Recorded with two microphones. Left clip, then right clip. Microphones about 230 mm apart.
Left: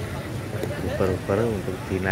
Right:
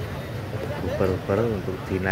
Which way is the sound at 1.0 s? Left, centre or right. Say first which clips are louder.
Even; centre.